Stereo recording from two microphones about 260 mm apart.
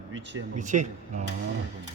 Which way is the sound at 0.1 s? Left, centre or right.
Right.